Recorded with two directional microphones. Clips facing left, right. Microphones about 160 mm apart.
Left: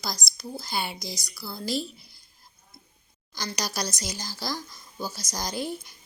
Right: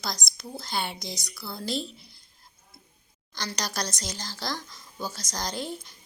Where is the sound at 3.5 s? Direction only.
5° left (ahead or behind).